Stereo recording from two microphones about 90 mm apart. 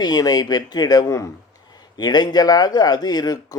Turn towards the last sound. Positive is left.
turn(degrees=45)  # may be behind; listen again after turning